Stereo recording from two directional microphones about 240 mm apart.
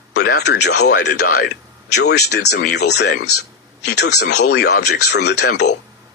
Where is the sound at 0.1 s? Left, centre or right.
Left.